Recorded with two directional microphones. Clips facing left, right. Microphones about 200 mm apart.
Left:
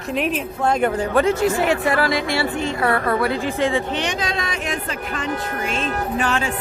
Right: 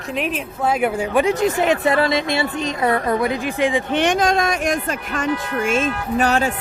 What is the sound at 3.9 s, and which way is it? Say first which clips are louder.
Speech: right 7 dB; 50° right (ahead or behind).